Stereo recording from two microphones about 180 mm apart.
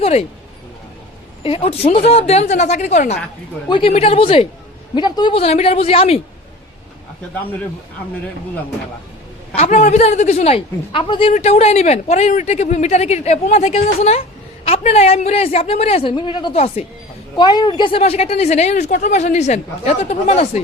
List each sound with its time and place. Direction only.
0.0 s a woman's voice: 35° left (ahead or behind)
1.5 s a woman's voice: 30° left (ahead or behind)
9.6 s a woman's voice: 40° left (ahead or behind)
17.3 s a woman's voice: 25° left (ahead or behind)